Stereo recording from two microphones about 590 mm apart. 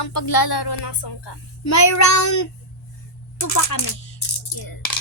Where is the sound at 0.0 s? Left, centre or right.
Left.